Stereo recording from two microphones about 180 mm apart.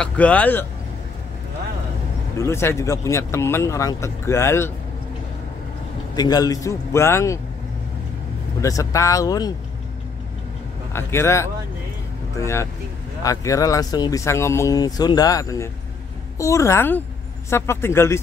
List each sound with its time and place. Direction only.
0.0 s speech: 5° left (ahead or behind)
2.3 s speech: 15° left (ahead or behind)
6.1 s speech: 20° left (ahead or behind)
8.5 s speech: 20° left (ahead or behind)
10.9 s speech: 15° left (ahead or behind)